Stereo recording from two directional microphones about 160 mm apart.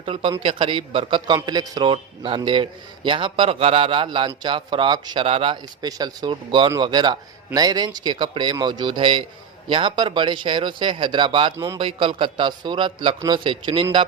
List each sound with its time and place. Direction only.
0.0 s a man's voice: 35° right (ahead or behind)
11.5 s speech: 20° right (ahead or behind)
11.8 s a man's voice: 35° right (ahead or behind)